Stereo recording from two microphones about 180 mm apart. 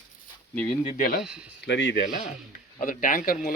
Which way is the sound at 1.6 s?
75° left (ahead or behind).